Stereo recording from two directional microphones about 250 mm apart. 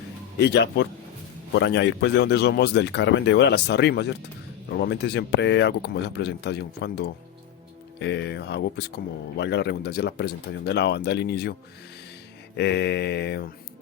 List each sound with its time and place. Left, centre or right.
0.3 s speech: left
12.5 s speech: left